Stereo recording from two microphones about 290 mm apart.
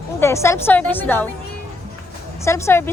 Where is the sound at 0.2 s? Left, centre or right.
Centre.